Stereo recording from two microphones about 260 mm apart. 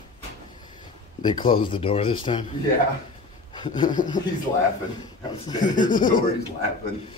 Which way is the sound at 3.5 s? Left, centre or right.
Centre.